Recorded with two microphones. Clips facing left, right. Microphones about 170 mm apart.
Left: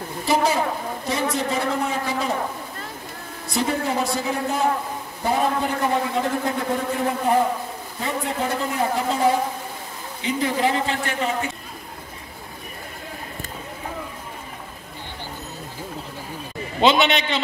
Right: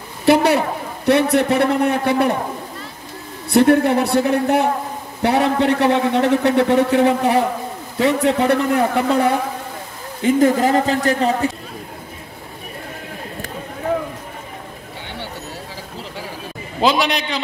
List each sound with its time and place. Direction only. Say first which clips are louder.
0.2 s a man's voice: right 7 dB; 65° right (ahead or behind)
3.4 s a man's voice: right 11 dB; 60° right (ahead or behind)
10.2 s a man's voice: right 8 dB; 45° right (ahead or behind)
16.8 s a man's voice: even; centre (ahead or behind)